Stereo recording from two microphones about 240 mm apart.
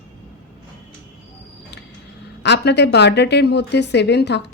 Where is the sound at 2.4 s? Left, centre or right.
Left.